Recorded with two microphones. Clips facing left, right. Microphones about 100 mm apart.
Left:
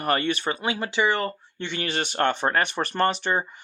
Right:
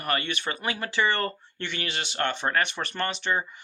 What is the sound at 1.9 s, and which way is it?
Speech, 45° left (ahead or behind).